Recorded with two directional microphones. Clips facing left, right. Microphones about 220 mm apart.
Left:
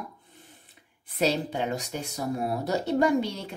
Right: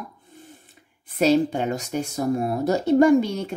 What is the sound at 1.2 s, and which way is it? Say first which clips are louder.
Speech: right 7 dB; 45° right (ahead or behind).